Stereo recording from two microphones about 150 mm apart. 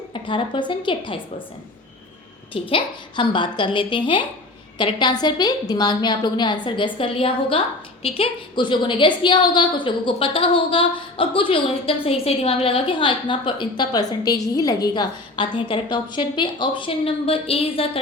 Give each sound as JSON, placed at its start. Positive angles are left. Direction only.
{"t": 0.1, "sound": "a woman's voice", "side_deg": 35}
{"t": 2.5, "sound": "a woman's voice", "side_deg": 35}